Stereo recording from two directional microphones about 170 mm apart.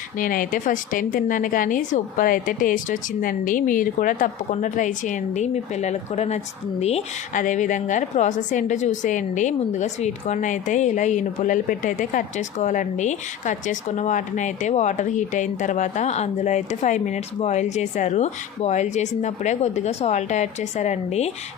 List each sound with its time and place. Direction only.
0.2 s a woman's voice: 55° left (ahead or behind)